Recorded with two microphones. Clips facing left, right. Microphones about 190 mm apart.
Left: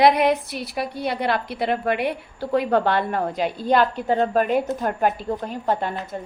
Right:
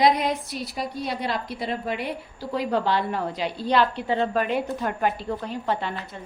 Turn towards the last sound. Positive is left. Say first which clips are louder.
# left 4 dB
turn(degrees=45)  # may be behind; listen again after turning